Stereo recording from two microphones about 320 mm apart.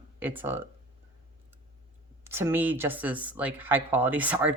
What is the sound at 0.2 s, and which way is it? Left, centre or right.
Speech, centre.